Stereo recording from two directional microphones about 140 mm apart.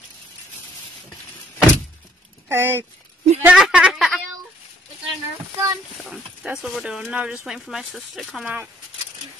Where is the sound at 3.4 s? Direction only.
10° right (ahead or behind).